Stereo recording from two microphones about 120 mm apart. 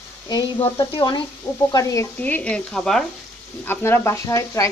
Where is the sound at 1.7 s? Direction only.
30° left (ahead or behind).